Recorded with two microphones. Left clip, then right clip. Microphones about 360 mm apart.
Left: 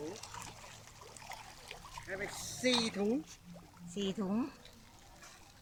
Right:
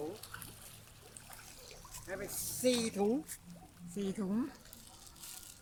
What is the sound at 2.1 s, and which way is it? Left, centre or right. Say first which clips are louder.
Speech: left 1 dB; centre.